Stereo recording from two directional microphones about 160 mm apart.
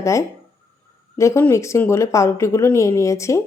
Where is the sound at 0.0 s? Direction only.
20° left (ahead or behind).